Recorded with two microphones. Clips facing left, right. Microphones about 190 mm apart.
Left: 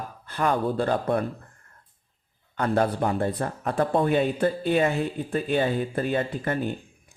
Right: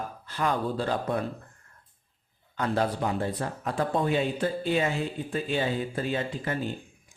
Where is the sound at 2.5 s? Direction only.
55° left (ahead or behind).